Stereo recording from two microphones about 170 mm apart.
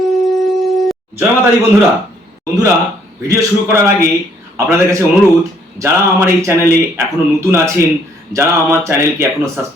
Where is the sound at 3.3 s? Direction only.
20° right (ahead or behind).